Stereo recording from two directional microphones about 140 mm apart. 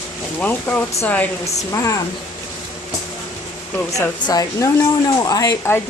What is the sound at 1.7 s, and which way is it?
Speech, 20° left (ahead or behind).